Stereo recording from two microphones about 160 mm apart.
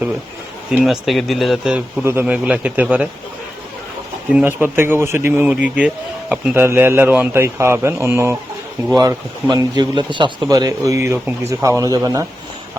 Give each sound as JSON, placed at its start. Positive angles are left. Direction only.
{"t": 0.7, "sound": "a man's voice", "side_deg": -5}
{"t": 4.3, "sound": "a man's voice", "side_deg": -10}